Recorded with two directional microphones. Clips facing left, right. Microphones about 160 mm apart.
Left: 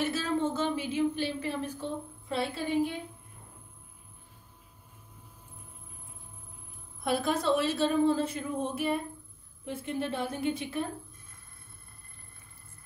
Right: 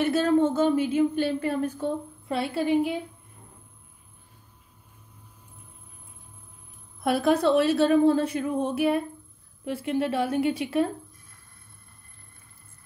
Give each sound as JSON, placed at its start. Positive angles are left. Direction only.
{"t": 0.0, "sound": "speech", "side_deg": -55}
{"t": 7.0, "sound": "a woman's voice", "side_deg": -65}